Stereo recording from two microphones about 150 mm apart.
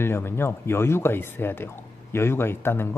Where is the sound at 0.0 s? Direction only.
15° left (ahead or behind).